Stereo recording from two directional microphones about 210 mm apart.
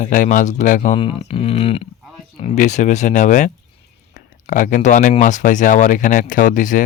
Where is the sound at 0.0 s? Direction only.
40° left (ahead or behind).